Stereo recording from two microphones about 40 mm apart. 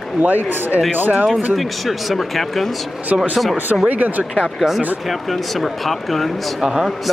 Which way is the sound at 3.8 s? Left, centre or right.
Right.